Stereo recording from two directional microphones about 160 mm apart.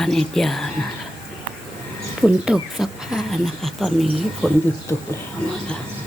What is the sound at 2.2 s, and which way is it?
Speech, 5° right (ahead or behind).